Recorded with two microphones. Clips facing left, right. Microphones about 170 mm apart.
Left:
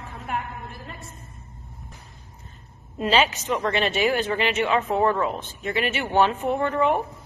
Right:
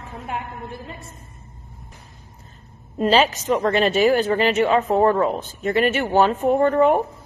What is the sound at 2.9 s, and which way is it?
A woman's voice, 40° right (ahead or behind).